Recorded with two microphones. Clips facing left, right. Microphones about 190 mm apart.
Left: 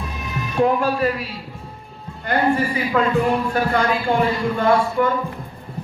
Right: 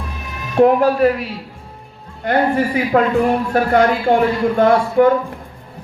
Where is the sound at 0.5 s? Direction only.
60° right (ahead or behind).